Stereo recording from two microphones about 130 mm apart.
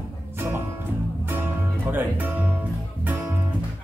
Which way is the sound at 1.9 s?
15° right (ahead or behind).